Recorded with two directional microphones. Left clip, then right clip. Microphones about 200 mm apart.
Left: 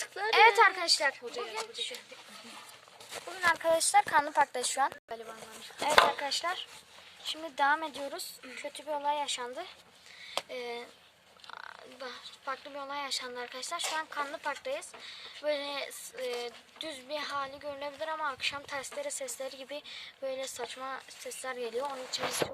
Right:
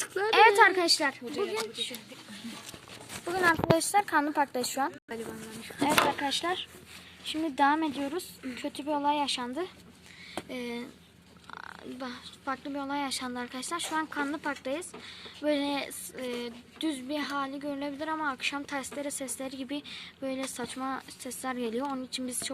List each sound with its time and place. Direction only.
0.0 s a sound: 20° left (ahead or behind)
0.3 s speech: centre (ahead or behind)
3.4 s speech: 5° right (ahead or behind)
5.8 s speech: centre (ahead or behind)